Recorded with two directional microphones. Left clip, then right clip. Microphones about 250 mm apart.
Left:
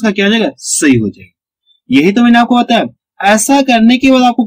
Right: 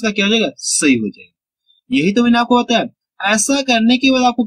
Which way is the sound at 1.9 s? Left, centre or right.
Centre.